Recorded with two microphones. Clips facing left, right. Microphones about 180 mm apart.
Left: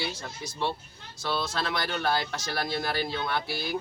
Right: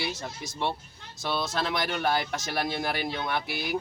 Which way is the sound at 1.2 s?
20° right (ahead or behind).